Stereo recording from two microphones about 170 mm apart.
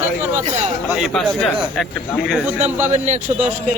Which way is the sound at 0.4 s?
45° right (ahead or behind).